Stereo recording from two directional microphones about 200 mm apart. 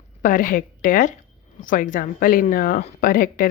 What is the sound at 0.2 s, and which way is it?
A woman's voice, 40° left (ahead or behind).